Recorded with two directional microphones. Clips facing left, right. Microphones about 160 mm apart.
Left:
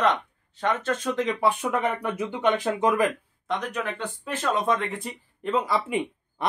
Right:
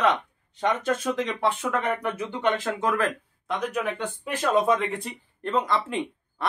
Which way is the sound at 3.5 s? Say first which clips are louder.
Right 1 dB; 5° right (ahead or behind).